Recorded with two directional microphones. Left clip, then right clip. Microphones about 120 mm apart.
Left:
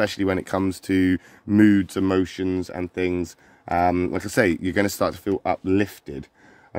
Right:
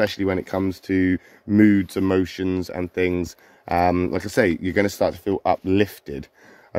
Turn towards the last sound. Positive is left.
turn(degrees=0)  # may be behind; listen again after turning